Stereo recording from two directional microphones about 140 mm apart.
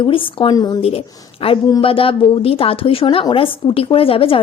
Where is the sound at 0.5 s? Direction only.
30° left (ahead or behind).